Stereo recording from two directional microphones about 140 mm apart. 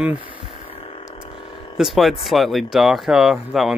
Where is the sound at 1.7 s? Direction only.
Centre (ahead or behind).